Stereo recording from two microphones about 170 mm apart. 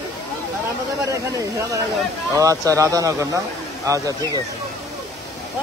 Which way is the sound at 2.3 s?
20° right (ahead or behind).